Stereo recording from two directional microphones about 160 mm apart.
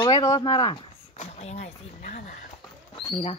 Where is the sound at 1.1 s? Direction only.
40° left (ahead or behind).